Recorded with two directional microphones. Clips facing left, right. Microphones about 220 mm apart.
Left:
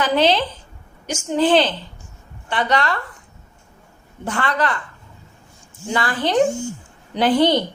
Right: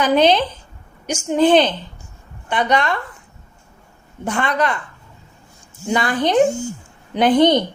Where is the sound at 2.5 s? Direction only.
20° right (ahead or behind).